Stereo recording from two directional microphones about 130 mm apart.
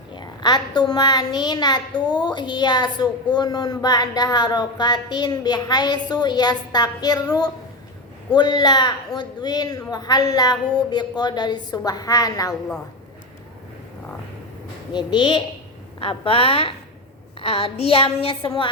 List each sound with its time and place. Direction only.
0.1 s a child's voice: 35° left (ahead or behind)
14.9 s a woman's voice: 35° left (ahead or behind)